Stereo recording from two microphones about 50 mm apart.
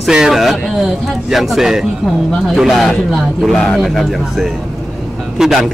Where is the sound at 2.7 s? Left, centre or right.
Centre.